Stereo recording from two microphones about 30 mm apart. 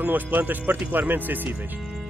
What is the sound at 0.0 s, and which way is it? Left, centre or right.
Speech, right.